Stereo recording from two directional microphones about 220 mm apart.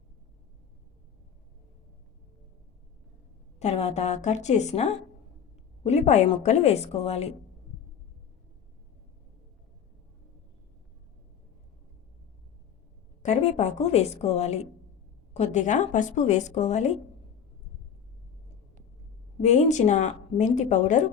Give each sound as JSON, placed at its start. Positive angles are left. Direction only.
{"t": 3.6, "sound": "a woman's voice", "side_deg": 30}
{"t": 13.2, "sound": "a woman's voice", "side_deg": 30}
{"t": 19.4, "sound": "a woman's voice", "side_deg": 30}